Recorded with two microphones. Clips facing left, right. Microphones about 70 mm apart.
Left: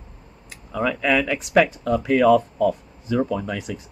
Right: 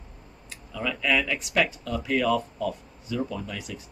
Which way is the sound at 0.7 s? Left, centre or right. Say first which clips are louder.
Left 6 dB; left.